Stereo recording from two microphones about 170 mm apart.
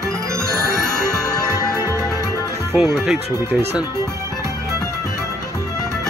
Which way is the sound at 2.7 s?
5° right (ahead or behind).